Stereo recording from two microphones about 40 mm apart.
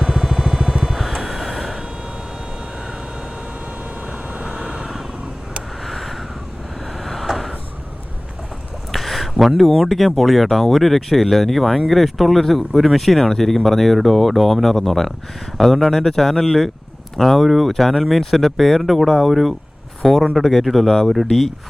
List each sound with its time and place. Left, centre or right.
0.0 s vehicle: centre
0.9 s vehicle: centre
4.0 s vehicle: right
4.5 s vehicle: centre
8.9 s speech: centre